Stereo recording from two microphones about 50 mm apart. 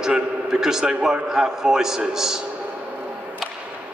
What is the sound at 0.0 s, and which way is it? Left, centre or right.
A man's voice, centre.